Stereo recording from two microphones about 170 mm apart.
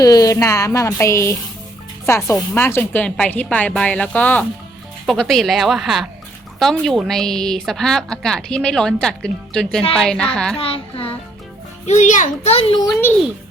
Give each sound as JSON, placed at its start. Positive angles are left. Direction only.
{"t": 0.0, "sound": "a woman's voice", "side_deg": 20}
{"t": 10.6, "sound": "a child's voice", "side_deg": 30}
{"t": 11.9, "sound": "a child's voice", "side_deg": 45}
{"t": 12.8, "sound": "a woman's voice", "side_deg": 10}